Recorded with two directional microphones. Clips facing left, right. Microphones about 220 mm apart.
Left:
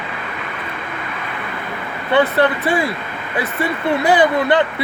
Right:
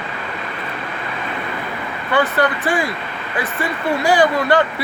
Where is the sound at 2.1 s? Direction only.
25° left (ahead or behind).